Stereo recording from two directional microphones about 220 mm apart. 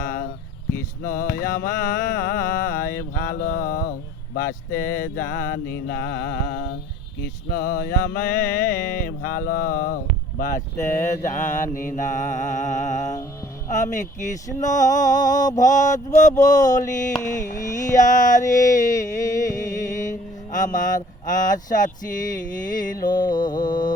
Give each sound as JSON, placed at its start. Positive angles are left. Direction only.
{"t": 0.0, "sound": "a sound", "side_deg": 45}
{"t": 1.0, "sound": "music", "side_deg": 40}
{"t": 4.4, "sound": "mantra", "side_deg": 40}
{"t": 9.0, "sound": "music", "side_deg": 40}
{"t": 16.3, "sound": "speech", "side_deg": 15}
{"t": 16.6, "sound": "music", "side_deg": 35}
{"t": 20.0, "sound": "speech", "side_deg": 35}
{"t": 23.2, "sound": "mantra", "side_deg": 20}